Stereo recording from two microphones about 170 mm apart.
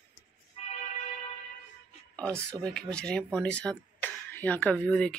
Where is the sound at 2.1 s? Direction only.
5° left (ahead or behind).